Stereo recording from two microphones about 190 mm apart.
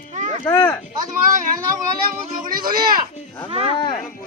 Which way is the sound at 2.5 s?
50° right (ahead or behind).